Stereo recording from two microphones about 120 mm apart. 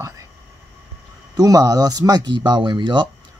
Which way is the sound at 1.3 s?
30° right (ahead or behind).